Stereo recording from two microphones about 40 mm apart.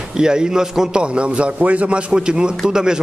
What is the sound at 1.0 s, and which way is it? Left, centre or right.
A man's voice, right.